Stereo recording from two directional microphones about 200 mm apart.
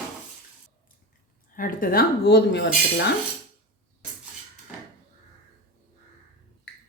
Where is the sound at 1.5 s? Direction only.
45° left (ahead or behind).